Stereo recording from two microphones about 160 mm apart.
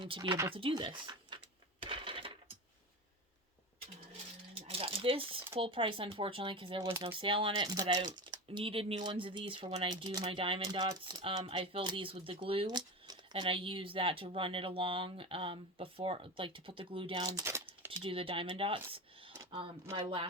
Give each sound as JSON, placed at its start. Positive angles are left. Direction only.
{"t": 0.0, "sound": "speech", "side_deg": -30}
{"t": 1.8, "sound": "coin", "side_deg": -35}
{"t": 4.6, "sound": "a sound", "side_deg": -35}
{"t": 5.5, "sound": "speech", "side_deg": -35}
{"t": 10.1, "sound": "speech", "side_deg": -20}
{"t": 10.3, "sound": "speech", "side_deg": -35}
{"t": 17.3, "sound": "a sound", "side_deg": -15}
{"t": 18.0, "sound": "speech", "side_deg": -35}